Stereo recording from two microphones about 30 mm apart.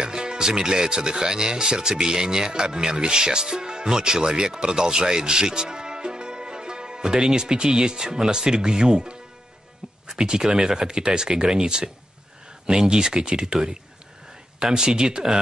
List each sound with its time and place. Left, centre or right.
0.0 s speech: right
14.6 s speech: centre